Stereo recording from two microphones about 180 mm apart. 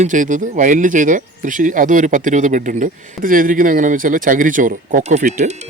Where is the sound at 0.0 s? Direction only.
45° right (ahead or behind).